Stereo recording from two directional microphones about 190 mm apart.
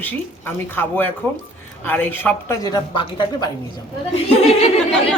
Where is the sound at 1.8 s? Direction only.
10° left (ahead or behind); by 4.7 s 30° left (ahead or behind).